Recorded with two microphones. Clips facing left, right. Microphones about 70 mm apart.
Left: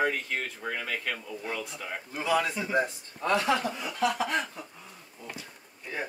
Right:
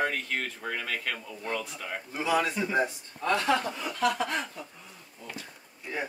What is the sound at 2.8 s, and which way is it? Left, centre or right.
Speech, centre.